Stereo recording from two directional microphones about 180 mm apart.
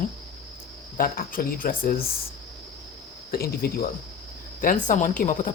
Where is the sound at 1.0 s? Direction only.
50° left (ahead or behind).